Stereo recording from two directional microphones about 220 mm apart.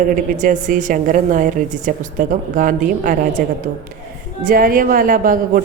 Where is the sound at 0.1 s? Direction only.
35° right (ahead or behind).